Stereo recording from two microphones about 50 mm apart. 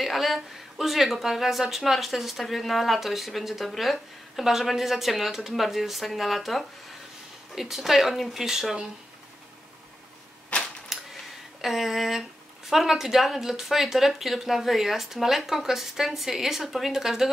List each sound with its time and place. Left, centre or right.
0.0 s speech: centre
10.5 s typewriter: left
11.6 s speech: centre